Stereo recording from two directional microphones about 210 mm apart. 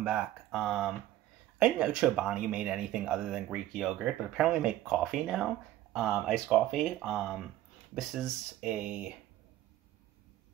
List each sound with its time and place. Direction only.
0.0 s speech: 5° right (ahead or behind)